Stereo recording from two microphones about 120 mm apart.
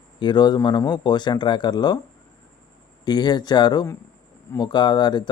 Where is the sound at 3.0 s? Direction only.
35° left (ahead or behind).